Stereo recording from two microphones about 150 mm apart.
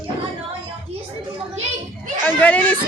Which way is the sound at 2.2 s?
10° left (ahead or behind).